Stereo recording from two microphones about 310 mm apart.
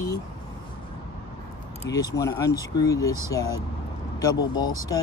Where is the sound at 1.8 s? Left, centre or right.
Centre.